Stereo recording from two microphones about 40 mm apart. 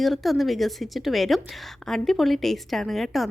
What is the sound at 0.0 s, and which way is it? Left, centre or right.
A woman's voice, centre.